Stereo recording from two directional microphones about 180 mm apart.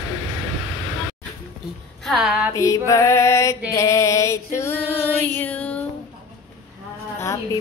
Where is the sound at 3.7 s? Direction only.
15° left (ahead or behind).